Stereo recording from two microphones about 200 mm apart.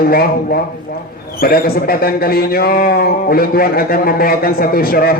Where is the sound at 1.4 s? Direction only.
50° left (ahead or behind).